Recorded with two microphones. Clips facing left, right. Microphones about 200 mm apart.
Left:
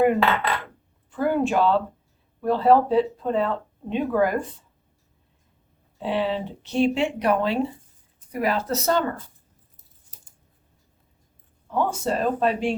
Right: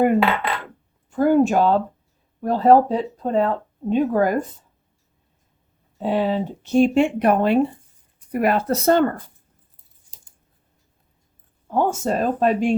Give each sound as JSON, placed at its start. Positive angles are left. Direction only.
{"t": 1.1, "sound": "speech", "side_deg": -45}
{"t": 6.0, "sound": "speech", "side_deg": -45}
{"t": 11.7, "sound": "speech", "side_deg": -45}